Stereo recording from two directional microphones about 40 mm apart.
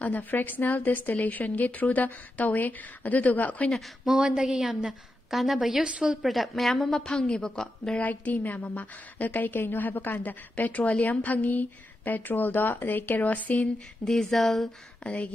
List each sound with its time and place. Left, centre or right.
0.0 s a woman's voice: left
4.2 s a woman's voice: centre
5.3 s a woman's voice: centre
5.9 s a woman's voice: right
6.2 s a woman's voice: centre
7.0 s a woman's voice: centre
8.0 s a woman's voice: left
10.6 s a woman's voice: left
14.0 s a woman's voice: centre